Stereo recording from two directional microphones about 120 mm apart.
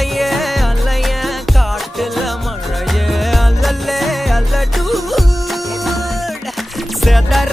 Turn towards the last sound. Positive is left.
turn(degrees=0)  # may be behind; listen again after turning